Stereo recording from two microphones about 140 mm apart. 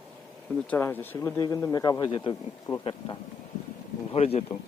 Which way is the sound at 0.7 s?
15° left (ahead or behind).